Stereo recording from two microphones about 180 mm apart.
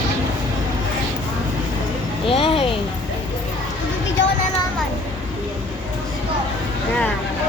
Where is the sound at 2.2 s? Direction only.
30° left (ahead or behind).